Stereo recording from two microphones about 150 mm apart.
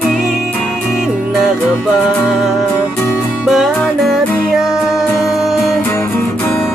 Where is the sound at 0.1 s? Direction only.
5° right (ahead or behind).